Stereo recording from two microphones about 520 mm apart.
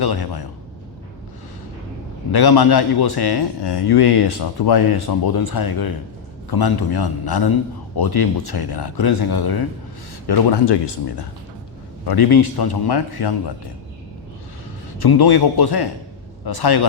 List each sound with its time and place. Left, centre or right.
0.0 s a man's voice: left
2.3 s a man's voice: left
12.0 s a man's voice: left
14.9 s a man's voice: left